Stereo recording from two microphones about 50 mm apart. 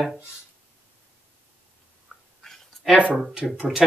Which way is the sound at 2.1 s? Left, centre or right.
Centre.